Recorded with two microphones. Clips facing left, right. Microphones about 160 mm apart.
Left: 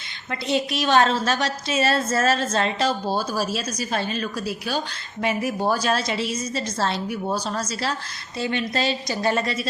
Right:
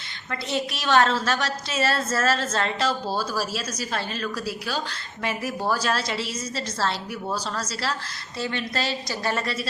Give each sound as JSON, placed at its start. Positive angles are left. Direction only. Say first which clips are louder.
{"t": 0.3, "sound": "a woman's voice", "louder": "left 4 dB", "side_deg": 20}